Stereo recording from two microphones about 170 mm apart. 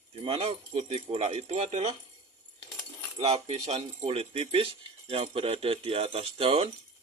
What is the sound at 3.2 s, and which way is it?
Speech, 40° right (ahead or behind).